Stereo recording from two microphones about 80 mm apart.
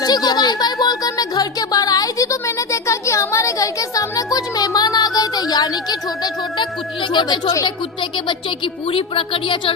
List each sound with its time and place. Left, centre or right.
0.0 s music: left
8.1 s a woman's voice: left